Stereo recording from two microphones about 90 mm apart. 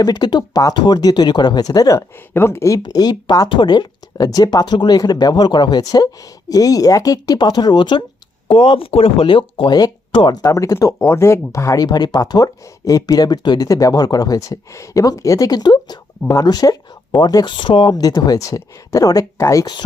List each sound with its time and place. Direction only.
0.0 s speech: 50° left (ahead or behind)
2.0 s speech: 30° left (ahead or behind)
2.7 s speech: 45° left (ahead or behind)
3.5 s speech: 60° left (ahead or behind)
8.4 s speech: 75° left (ahead or behind)
10.4 s speech: 40° left (ahead or behind)
13.7 s speech: 40° left (ahead or behind)